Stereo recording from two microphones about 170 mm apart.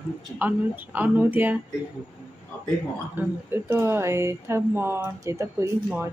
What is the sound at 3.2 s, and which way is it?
Speech, 10° right (ahead or behind).